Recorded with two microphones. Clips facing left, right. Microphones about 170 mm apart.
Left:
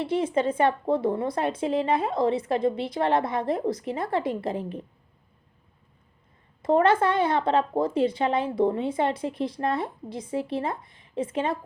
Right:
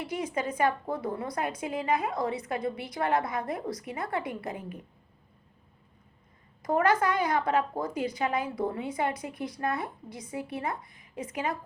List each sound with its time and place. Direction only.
0.0 s speech: 25° left (ahead or behind)
6.6 s speech: 25° left (ahead or behind)